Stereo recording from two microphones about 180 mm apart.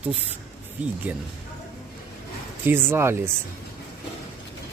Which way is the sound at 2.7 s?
10° right (ahead or behind).